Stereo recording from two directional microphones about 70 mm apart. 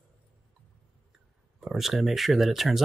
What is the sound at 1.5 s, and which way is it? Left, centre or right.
Speech, centre.